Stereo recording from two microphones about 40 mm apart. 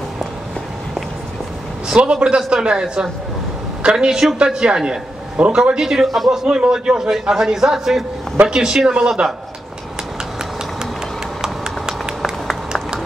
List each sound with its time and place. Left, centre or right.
1.9 s a man's voice: right
6.0 s a man's voice: centre
6.3 s a man's voice: centre